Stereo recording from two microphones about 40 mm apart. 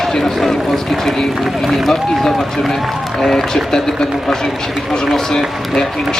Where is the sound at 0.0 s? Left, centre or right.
Centre.